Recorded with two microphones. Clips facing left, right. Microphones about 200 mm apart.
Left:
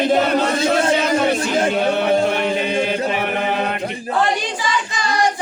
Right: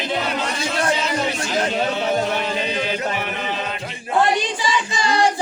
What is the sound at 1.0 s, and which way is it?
Music, 55° left (ahead or behind).